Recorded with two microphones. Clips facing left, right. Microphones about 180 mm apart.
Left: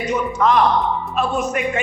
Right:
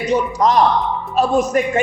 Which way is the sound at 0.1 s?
35° right (ahead or behind).